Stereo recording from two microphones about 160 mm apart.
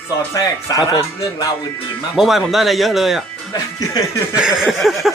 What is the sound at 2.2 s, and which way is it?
Speech, centre (ahead or behind).